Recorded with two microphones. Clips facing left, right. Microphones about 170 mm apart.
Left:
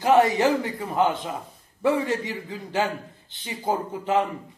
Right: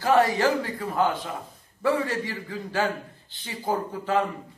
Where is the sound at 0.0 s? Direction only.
20° left (ahead or behind).